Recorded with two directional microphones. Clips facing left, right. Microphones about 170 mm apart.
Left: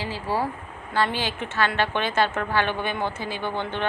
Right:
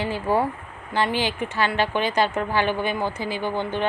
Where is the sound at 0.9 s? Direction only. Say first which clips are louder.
Right 2 dB; 15° right (ahead or behind).